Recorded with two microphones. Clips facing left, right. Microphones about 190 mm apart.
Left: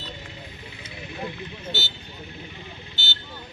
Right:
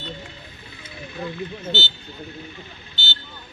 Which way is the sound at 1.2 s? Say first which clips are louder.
Right 5 dB; 20° left (ahead or behind).